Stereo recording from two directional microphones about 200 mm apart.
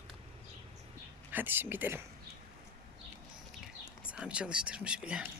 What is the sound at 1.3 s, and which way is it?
Speech, 10° right (ahead or behind).